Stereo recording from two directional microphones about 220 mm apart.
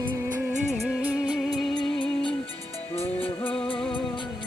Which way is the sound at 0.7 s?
5° right (ahead or behind).